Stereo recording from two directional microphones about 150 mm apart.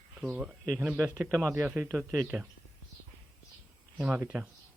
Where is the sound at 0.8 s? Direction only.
10° right (ahead or behind).